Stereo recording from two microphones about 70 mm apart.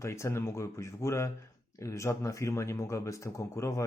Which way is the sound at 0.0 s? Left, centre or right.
Left.